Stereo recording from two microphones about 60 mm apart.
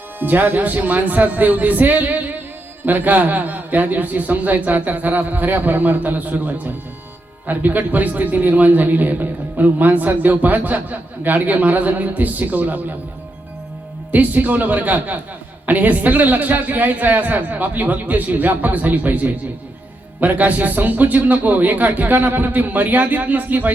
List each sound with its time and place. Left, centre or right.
0.2 s a man's voice: right
14.1 s a man's voice: right